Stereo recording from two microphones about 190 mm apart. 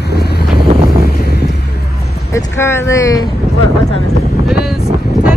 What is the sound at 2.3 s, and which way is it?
Speech, 15° left (ahead or behind).